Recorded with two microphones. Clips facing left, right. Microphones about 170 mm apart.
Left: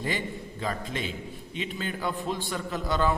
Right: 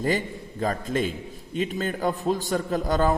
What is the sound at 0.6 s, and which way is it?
A man's voice, 45° right (ahead or behind).